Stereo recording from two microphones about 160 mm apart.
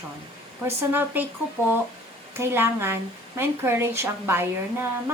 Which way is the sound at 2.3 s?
15° right (ahead or behind).